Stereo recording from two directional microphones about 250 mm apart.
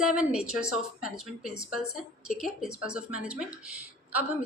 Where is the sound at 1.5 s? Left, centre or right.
Left.